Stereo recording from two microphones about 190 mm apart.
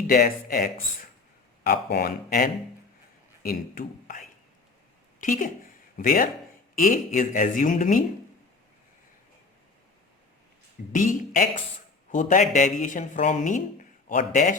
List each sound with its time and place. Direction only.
0.1 s a man's voice: 50° left (ahead or behind)
5.2 s speech: 45° left (ahead or behind)
10.9 s speech: 45° left (ahead or behind)